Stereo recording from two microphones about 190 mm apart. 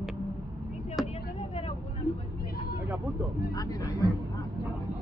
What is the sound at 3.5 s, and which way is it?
Speech, 20° left (ahead or behind).